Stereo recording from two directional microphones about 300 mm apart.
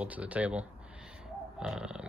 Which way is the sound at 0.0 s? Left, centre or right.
Centre.